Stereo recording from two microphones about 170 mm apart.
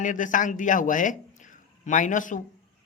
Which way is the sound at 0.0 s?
50° left (ahead or behind).